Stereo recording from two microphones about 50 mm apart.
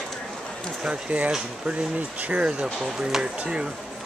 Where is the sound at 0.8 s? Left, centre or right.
Right.